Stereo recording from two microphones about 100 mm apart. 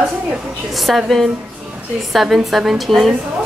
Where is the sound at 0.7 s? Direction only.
Centre (ahead or behind).